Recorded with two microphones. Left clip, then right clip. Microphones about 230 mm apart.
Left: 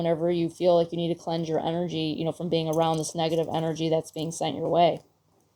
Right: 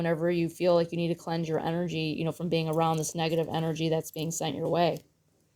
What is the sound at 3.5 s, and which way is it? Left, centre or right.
Speech, right.